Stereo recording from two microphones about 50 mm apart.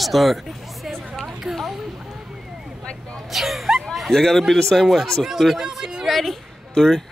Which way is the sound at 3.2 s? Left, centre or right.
Centre.